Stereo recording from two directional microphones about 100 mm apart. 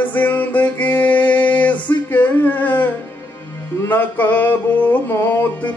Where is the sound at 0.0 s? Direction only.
15° left (ahead or behind).